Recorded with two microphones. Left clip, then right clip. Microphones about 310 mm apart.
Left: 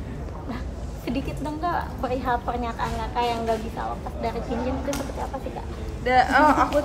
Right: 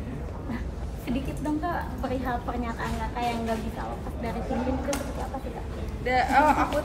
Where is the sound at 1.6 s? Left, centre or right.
Centre.